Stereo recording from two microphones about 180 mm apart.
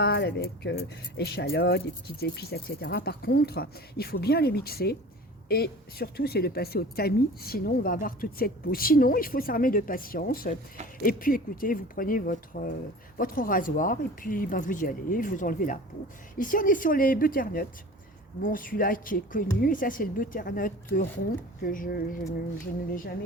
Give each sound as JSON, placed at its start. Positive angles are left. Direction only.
{"t": 0.0, "sound": "a woman's voice", "side_deg": 65}